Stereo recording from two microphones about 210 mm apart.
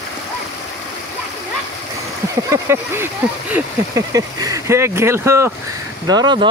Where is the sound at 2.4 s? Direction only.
10° right (ahead or behind).